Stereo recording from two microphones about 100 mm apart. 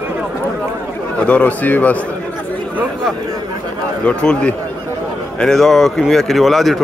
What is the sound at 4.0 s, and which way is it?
A man's voice, 10° left (ahead or behind).